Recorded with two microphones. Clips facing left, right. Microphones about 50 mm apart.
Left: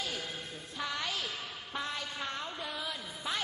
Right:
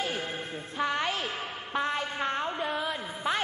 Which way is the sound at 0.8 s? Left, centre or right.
Right.